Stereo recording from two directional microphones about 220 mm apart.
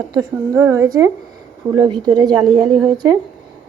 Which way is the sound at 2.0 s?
20° right (ahead or behind).